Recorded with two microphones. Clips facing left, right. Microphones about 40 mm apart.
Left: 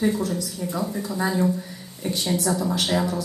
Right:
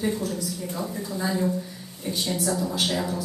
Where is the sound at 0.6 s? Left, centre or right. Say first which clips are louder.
Left 4 dB; centre.